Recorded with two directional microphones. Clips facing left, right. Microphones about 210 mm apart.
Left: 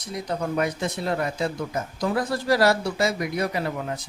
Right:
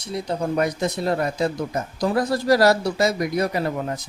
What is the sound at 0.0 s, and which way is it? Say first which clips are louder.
Speech: right 3 dB; 30° right (ahead or behind).